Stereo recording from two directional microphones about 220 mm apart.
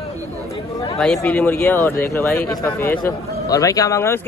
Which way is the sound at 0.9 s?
Centre (ahead or behind).